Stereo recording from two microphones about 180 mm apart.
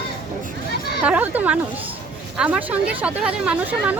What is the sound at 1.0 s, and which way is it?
Speech, 10° right (ahead or behind).